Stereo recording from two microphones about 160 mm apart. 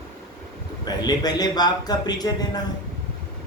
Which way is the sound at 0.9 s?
25° left (ahead or behind).